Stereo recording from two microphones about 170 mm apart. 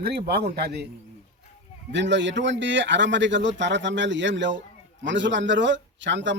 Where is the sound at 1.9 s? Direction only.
90° right.